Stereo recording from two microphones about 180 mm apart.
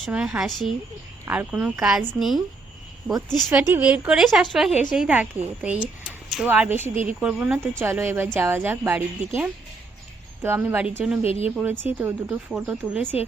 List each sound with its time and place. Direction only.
0.0 s a woman's voice: 5° right (ahead or behind)
3.5 s a woman's voice: 5° right (ahead or behind)
6.9 s speech: 45° right (ahead or behind)
7.2 s speech: 5° right (ahead or behind)
10.4 s speech: 15° right (ahead or behind)
11.2 s speech: 35° left (ahead or behind)
11.4 s speech: 10° right (ahead or behind)